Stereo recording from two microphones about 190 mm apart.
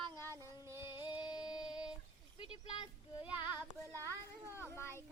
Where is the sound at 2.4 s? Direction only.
25° left (ahead or behind).